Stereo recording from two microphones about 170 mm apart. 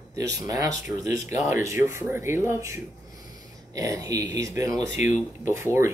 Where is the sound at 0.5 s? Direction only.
20° right (ahead or behind).